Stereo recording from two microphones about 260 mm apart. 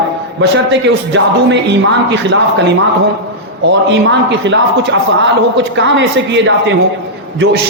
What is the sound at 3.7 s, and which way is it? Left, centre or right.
A man's voice, right.